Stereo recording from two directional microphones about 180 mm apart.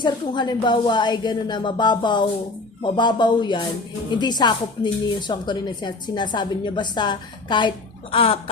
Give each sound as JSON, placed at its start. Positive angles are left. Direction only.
{"t": 0.0, "sound": "a woman's voice", "side_deg": 25}